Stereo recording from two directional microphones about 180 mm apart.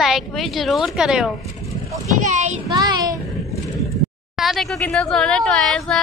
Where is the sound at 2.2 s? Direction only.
40° right (ahead or behind).